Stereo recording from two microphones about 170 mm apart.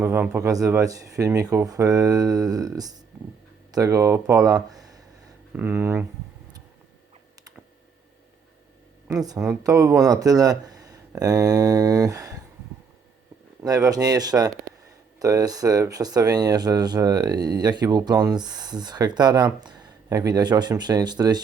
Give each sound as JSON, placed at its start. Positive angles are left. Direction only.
{"t": 0.0, "sound": "speech", "side_deg": -10}
{"t": 9.6, "sound": "speech", "side_deg": -15}
{"t": 13.6, "sound": "speech", "side_deg": -20}